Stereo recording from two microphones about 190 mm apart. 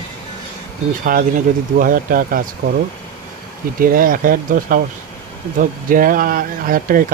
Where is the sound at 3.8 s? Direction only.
50° right (ahead or behind).